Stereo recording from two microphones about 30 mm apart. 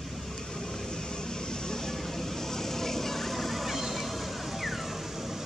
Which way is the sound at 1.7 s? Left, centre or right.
Centre.